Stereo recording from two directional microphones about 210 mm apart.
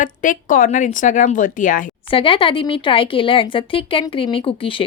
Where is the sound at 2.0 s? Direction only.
25° left (ahead or behind).